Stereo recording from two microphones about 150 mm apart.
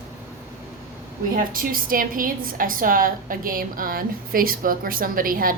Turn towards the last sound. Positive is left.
turn(degrees=-70)  # may be behind; listen again after turning